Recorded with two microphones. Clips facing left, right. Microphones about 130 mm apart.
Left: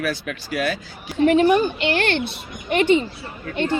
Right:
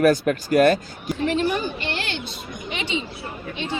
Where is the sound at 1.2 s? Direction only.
55° left (ahead or behind).